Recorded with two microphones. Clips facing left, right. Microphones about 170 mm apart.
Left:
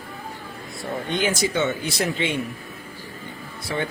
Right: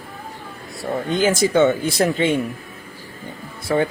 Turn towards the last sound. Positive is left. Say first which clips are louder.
# right 8 dB
turn(degrees=-45)  # may be behind; listen again after turning